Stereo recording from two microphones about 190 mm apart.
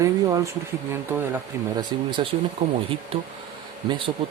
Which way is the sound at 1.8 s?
25° right (ahead or behind).